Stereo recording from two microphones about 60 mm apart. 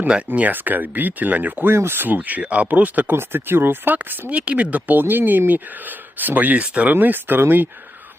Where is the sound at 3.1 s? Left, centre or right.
Right.